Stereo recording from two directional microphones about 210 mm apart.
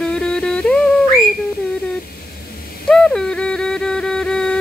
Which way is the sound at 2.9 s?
5° left (ahead or behind).